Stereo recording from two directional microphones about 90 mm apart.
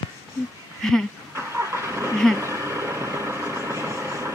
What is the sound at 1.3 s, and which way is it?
Vehicle, 30° right (ahead or behind).